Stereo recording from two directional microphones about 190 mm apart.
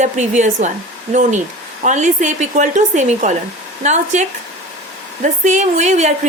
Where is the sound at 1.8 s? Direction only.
40° right (ahead or behind).